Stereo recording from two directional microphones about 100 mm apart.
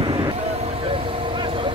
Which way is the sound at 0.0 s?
60° right (ahead or behind).